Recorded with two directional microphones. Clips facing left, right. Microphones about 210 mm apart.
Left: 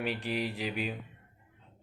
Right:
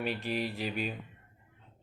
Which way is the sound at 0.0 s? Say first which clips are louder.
Even; 15° left (ahead or behind).